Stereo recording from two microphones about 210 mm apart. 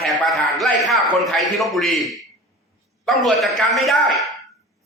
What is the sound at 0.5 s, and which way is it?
A man's voice, centre (ahead or behind).